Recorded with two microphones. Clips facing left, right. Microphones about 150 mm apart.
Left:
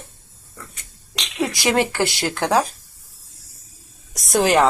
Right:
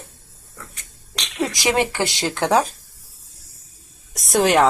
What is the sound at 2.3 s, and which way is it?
Speech, centre (ahead or behind).